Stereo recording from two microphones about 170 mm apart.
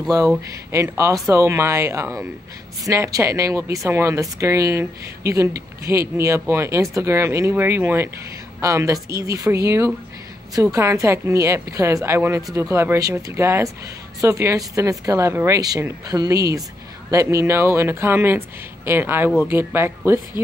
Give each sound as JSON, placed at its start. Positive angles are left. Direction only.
{"t": 0.5, "sound": "speech", "side_deg": -15}